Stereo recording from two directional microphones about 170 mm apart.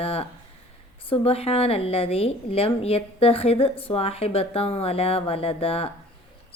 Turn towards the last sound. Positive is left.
turn(degrees=35)  # may be behind; listen again after turning